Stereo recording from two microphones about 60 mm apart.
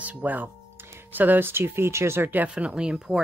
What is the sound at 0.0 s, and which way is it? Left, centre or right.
Speech, right.